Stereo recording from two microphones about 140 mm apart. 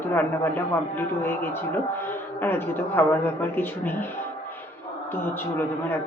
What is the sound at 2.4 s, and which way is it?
Speech, 15° left (ahead or behind).